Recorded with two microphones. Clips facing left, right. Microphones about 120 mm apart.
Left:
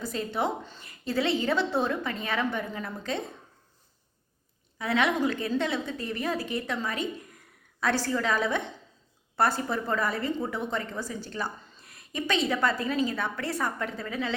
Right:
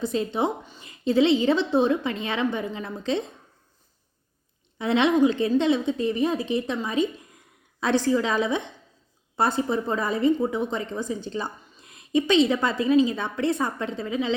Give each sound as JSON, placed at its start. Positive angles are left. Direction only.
{"t": 0.0, "sound": "a woman's voice", "side_deg": -20}
{"t": 4.8, "sound": "a woman's voice", "side_deg": -25}